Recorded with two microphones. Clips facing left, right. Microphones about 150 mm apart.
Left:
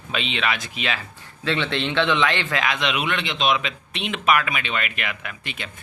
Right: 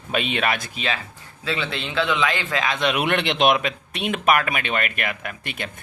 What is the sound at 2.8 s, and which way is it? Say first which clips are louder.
Speech: right 4 dB; 50° right (ahead or behind).